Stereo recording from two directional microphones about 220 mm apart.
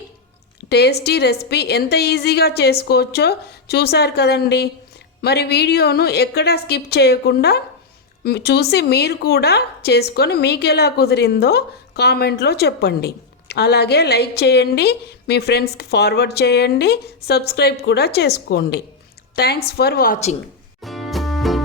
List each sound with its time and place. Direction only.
0.7 s a woman's voice: 50° left (ahead or behind)
20.8 s music: centre (ahead or behind)